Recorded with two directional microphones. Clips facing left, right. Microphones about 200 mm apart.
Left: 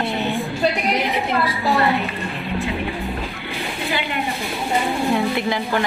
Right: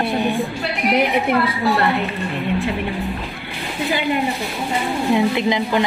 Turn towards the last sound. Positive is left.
turn(degrees=-15)  # may be behind; listen again after turning